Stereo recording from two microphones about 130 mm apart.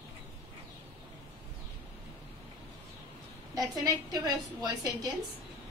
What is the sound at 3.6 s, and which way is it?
A woman's voice, 30° right (ahead or behind).